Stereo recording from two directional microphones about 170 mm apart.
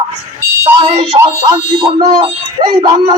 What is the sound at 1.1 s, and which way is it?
Speech, 25° right (ahead or behind).